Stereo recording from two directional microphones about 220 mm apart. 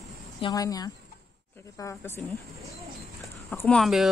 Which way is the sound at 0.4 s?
15° left (ahead or behind).